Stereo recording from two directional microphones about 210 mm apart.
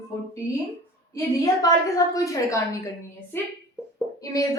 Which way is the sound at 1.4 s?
15° left (ahead or behind).